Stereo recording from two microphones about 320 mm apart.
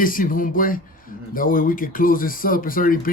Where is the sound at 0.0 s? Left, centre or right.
Left.